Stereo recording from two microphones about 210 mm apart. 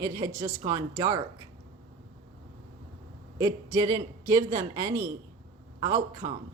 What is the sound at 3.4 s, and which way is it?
A man's voice, 15° right (ahead or behind).